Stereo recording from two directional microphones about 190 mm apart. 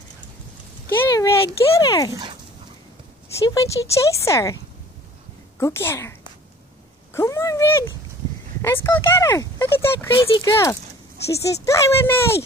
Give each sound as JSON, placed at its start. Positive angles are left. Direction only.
{"t": 0.8, "sound": "speech", "side_deg": 15}
{"t": 3.4, "sound": "speech", "side_deg": 15}
{"t": 5.6, "sound": "speech", "side_deg": 15}
{"t": 7.2, "sound": "speech", "side_deg": 15}